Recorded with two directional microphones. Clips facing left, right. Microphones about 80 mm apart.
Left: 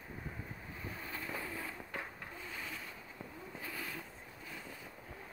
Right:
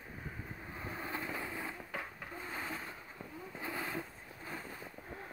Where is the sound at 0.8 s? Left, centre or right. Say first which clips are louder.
Right 4 dB; right.